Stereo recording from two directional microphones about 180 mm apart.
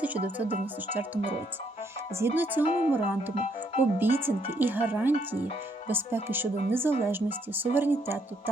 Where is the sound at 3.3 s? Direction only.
40° left (ahead or behind).